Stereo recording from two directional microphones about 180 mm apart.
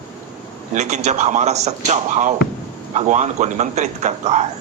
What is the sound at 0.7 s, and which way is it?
A man's voice, 40° right (ahead or behind).